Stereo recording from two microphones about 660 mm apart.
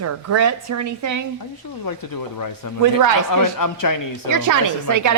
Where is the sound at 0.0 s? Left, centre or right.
Right.